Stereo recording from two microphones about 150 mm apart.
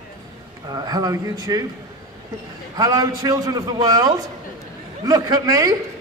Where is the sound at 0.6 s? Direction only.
25° right (ahead or behind).